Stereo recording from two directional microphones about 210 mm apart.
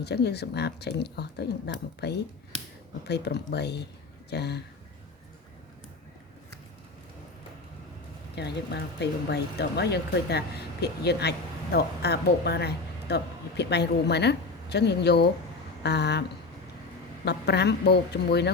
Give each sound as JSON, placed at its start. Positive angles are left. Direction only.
{"t": 0.0, "sound": "speech", "side_deg": 50}
{"t": 8.4, "sound": "speech", "side_deg": 55}
{"t": 17.2, "sound": "speech", "side_deg": 50}